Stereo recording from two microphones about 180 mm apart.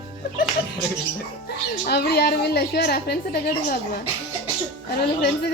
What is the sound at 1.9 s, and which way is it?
A woman's voice, 65° left (ahead or behind).